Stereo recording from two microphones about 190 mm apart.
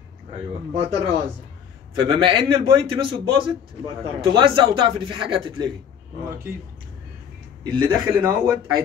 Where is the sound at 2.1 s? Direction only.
25° right (ahead or behind).